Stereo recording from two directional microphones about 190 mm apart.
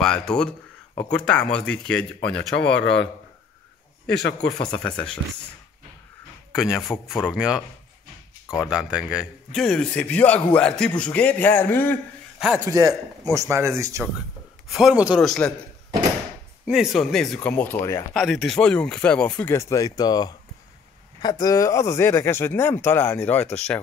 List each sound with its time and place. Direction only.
0.0 s speech: 5° left (ahead or behind)
2.8 s a man's voice: 70° left (ahead or behind)
4.1 s speech: 60° left (ahead or behind)
4.7 s speech: 5° left (ahead or behind)
6.5 s speech: centre (ahead or behind)
12.5 s a man's voice: 15° right (ahead or behind)
14.7 s speech: centre (ahead or behind)
16.6 s speech: centre (ahead or behind); by 18.0 s 15° left (ahead or behind)
18.1 s speech: centre (ahead or behind)